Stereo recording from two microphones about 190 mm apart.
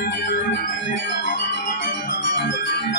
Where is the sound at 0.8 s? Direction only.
70° left (ahead or behind).